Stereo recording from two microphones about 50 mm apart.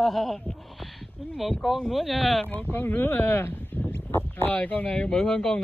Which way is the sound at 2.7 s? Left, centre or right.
Left.